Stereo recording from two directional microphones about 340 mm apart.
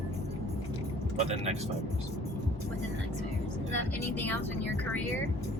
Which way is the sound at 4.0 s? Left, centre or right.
Centre.